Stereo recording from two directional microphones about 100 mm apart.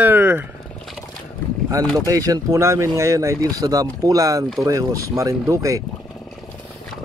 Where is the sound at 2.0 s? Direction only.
35° right (ahead or behind).